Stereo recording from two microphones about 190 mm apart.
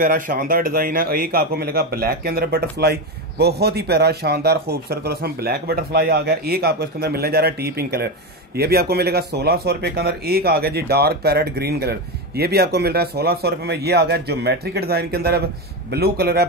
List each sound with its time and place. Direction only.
0.0 s a man's voice: 45° right (ahead or behind)